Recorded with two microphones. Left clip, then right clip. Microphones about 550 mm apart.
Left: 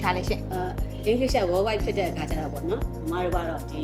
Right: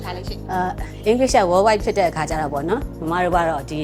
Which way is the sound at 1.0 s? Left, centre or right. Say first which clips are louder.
Right 8 dB; right.